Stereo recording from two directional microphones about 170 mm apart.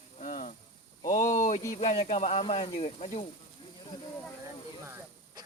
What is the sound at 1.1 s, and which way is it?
Speech, 50° left (ahead or behind).